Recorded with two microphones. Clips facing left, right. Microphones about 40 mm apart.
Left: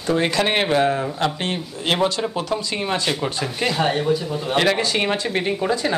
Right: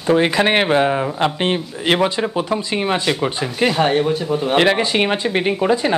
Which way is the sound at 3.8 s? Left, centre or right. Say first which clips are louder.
Right 1 dB; right.